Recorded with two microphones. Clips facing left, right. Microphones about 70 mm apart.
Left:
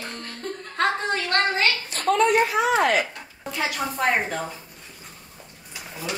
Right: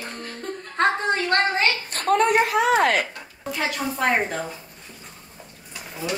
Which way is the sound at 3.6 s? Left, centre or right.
Centre.